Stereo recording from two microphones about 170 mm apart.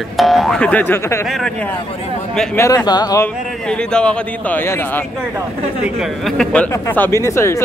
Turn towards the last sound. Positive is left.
turn(degrees=15)  # may be behind; listen again after turning